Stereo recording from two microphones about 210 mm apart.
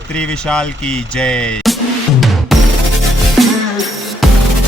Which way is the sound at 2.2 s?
Centre (ahead or behind).